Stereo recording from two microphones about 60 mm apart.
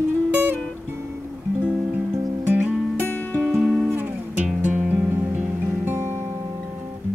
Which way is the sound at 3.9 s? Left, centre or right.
Right.